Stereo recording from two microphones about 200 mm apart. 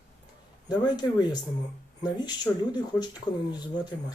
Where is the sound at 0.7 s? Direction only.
20° left (ahead or behind).